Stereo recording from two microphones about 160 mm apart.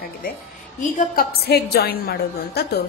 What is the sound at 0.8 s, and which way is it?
A woman's voice, 50° left (ahead or behind).